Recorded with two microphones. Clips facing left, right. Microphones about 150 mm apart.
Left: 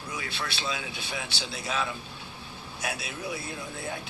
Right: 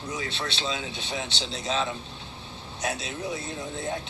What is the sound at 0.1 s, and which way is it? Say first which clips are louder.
A man's voice: right 3 dB; 25° right (ahead or behind).